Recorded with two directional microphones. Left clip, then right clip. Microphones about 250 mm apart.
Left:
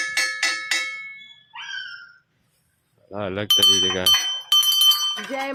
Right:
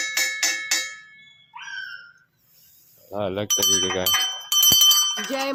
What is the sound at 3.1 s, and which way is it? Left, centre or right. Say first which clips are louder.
Speech: left 3 dB; centre.